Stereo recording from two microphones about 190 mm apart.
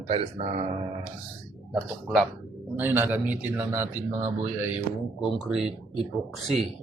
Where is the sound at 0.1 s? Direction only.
30° right (ahead or behind).